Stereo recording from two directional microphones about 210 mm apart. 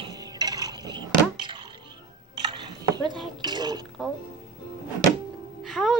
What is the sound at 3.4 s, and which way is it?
Mechanisms, 20° right (ahead or behind).